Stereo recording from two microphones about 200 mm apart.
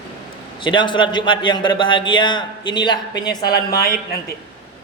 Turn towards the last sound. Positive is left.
turn(degrees=50)  # may be behind; listen again after turning